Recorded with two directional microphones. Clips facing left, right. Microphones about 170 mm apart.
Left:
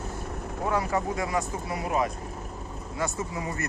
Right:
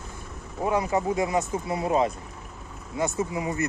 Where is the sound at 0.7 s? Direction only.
20° right (ahead or behind).